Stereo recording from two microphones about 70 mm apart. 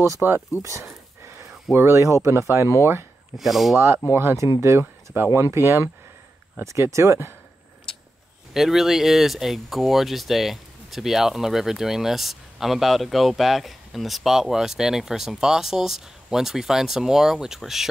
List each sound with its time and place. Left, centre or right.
0.2 s speech: centre
0.6 s speech: right
1.2 s a sound: right
1.7 s speech: right
3.3 s speech: centre
3.7 s speech: right
5.1 s speech: right
8.5 s speech: centre